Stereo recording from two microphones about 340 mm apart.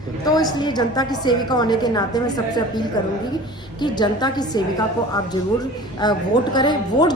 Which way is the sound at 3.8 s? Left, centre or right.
Centre.